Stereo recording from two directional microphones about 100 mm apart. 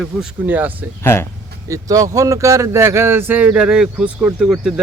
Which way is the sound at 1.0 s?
25° left (ahead or behind).